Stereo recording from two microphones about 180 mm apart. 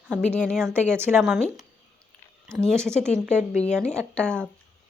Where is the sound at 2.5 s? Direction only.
Centre (ahead or behind).